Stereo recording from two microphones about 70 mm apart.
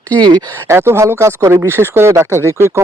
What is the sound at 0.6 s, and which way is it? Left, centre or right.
Speech, right.